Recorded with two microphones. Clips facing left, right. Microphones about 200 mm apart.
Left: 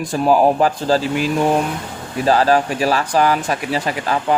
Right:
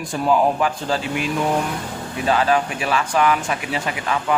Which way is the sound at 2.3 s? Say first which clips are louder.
Left 4 dB; 35° left (ahead or behind).